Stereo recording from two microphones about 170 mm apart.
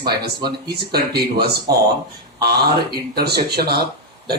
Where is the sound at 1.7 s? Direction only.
70° right (ahead or behind).